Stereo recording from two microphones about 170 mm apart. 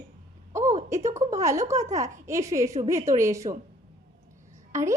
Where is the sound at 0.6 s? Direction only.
45° right (ahead or behind).